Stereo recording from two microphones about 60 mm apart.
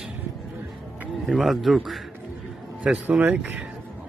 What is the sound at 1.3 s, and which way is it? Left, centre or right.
Speech, centre.